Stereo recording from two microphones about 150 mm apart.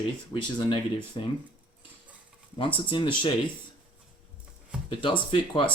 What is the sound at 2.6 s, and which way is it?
Speech, 35° left (ahead or behind).